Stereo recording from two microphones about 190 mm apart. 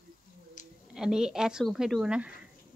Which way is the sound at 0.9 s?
5° right (ahead or behind).